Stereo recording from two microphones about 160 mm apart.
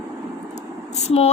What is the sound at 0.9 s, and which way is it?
Vehicle, 40° left (ahead or behind).